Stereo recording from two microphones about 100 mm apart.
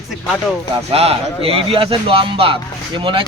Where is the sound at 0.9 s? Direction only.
85° right.